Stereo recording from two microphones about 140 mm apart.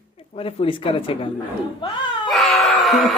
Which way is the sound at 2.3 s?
Centre (ahead or behind).